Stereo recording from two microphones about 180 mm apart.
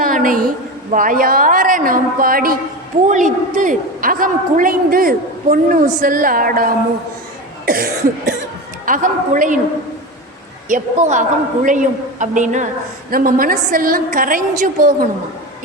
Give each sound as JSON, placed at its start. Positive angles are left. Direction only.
{"t": 0.0, "sound": "a sound", "side_deg": -50}
{"t": 0.9, "sound": "a man's voice", "side_deg": -50}
{"t": 7.6, "sound": "cough", "side_deg": -55}
{"t": 8.9, "sound": "a man's voice", "side_deg": -45}
{"t": 10.7, "sound": "a man's voice", "side_deg": -45}